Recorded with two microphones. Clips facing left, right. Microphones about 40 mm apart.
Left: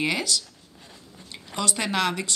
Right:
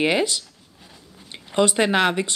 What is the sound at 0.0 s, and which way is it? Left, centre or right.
Speech, right.